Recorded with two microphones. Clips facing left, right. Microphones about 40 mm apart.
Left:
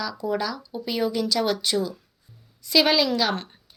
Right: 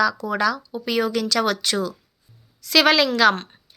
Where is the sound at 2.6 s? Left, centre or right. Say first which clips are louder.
Right 3 dB; right.